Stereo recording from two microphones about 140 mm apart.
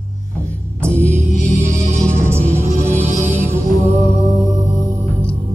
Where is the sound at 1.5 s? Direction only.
55° right (ahead or behind).